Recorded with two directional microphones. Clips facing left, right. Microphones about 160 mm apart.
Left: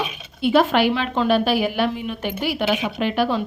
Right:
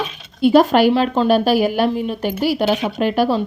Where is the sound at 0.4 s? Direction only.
40° right (ahead or behind).